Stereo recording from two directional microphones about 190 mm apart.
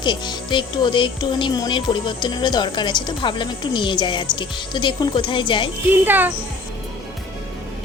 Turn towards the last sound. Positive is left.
turn(degrees=-10)  # may be behind; listen again after turning